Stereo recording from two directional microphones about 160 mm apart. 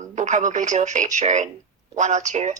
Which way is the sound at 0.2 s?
50° right (ahead or behind).